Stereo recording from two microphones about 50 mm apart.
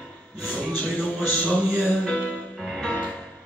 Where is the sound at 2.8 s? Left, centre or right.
Left.